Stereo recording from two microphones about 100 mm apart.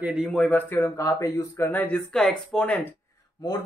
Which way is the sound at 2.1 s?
5° left (ahead or behind).